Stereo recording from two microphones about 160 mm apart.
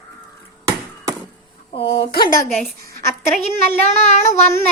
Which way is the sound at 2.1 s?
70° left (ahead or behind).